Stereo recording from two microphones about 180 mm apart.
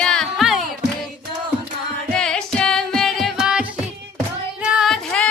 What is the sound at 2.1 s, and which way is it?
Music, 5° left (ahead or behind).